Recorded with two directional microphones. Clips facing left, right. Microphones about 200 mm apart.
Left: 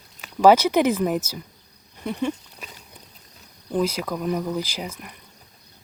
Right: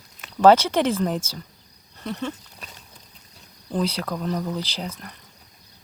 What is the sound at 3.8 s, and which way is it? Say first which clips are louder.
Speech: left 2 dB; 10° left (ahead or behind).